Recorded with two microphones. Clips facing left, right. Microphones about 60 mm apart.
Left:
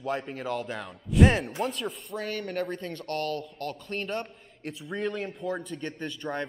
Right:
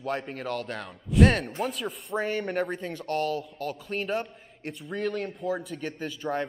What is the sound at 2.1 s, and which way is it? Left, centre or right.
Speech, right.